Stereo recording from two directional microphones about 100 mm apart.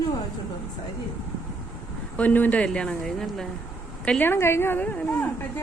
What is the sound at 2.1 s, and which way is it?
Speech, 15° left (ahead or behind).